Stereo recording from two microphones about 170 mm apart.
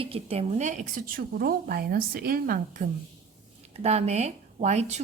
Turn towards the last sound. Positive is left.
turn(degrees=-40)  # may be behind; listen again after turning